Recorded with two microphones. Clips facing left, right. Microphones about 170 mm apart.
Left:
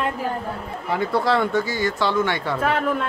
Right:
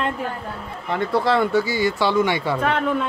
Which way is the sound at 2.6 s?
5° left (ahead or behind).